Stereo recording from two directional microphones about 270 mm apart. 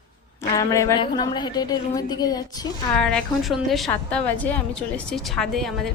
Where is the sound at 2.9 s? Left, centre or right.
Centre.